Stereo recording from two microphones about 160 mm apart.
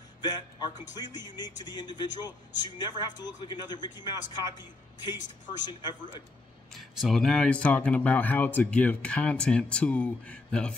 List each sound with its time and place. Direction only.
0.2 s speech: 25° left (ahead or behind)
6.7 s speech: centre (ahead or behind)